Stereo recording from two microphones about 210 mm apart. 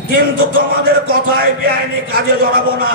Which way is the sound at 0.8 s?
45° right (ahead or behind).